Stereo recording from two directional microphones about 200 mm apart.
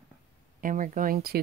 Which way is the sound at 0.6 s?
40° right (ahead or behind).